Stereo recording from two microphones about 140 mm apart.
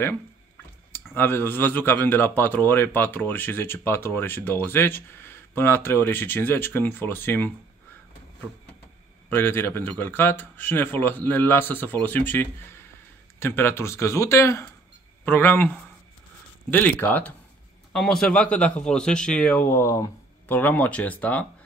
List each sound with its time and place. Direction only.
0.9 s speech: 15° left (ahead or behind)
9.3 s speech: 15° left (ahead or behind)